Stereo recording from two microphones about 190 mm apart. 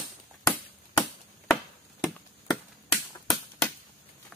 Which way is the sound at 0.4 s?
5° left (ahead or behind).